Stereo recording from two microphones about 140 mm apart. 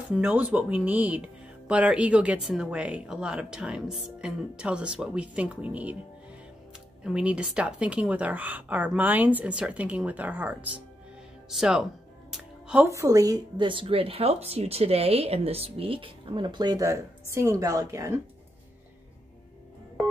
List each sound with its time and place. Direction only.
0.1 s speech: 10° right (ahead or behind)
7.0 s speech: 5° right (ahead or behind)
11.5 s music: 5° right (ahead or behind)
12.9 s speech: 25° right (ahead or behind)